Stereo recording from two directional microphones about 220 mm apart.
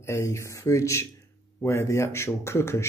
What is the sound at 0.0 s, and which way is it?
Speech, 15° left (ahead or behind).